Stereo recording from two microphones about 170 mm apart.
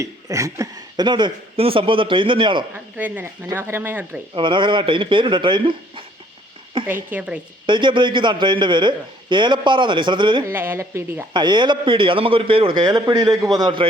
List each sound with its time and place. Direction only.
0.0 s a man's voice: 20° right (ahead or behind)
3.4 s speech: 15° right (ahead or behind)
4.4 s a man's voice: 30° right (ahead or behind)
6.8 s a sound: 30° right (ahead or behind)
7.1 s speech: 10° right (ahead or behind)
7.7 s a man's voice: 30° right (ahead or behind)
10.5 s speech: 10° right (ahead or behind)
11.3 s a man's voice: 25° right (ahead or behind)